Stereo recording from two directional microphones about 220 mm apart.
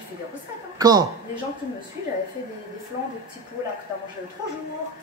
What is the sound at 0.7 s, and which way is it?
Speech, 15° right (ahead or behind).